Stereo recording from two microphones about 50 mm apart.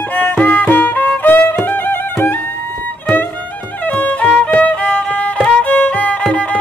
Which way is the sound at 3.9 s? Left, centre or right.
Left.